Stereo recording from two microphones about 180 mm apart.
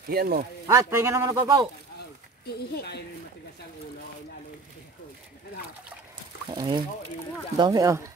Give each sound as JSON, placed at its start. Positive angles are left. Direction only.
{"t": 0.1, "sound": "speech", "side_deg": -60}
{"t": 0.7, "sound": "a man's voice", "side_deg": -15}
{"t": 2.4, "sound": "speech", "side_deg": 60}
{"t": 6.5, "sound": "speech", "side_deg": -25}